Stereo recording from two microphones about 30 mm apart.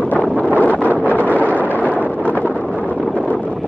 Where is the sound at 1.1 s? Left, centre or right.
Left.